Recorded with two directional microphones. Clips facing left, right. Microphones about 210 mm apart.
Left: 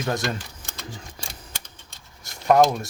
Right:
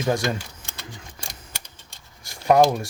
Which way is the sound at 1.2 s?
35° left (ahead or behind).